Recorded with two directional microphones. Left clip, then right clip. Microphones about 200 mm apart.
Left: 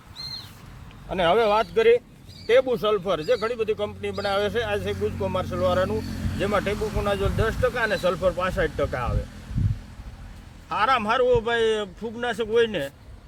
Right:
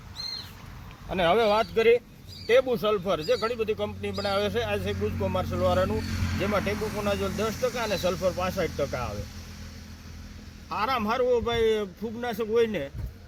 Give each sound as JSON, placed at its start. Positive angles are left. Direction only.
{"t": 1.1, "sound": "speech", "side_deg": 5}
{"t": 10.7, "sound": "speech", "side_deg": 15}